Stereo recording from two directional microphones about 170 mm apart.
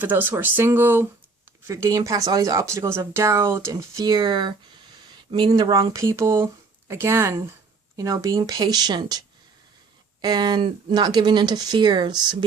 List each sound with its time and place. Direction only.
0.0 s speech: 10° right (ahead or behind); by 12.4 s 25° right (ahead or behind)